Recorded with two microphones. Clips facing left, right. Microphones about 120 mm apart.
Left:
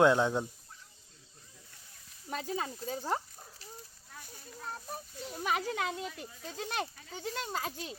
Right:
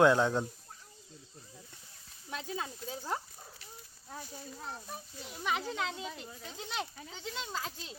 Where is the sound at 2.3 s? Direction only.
40° left (ahead or behind).